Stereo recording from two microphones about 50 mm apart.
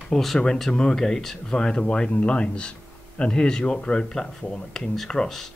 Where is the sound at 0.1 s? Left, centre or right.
Centre.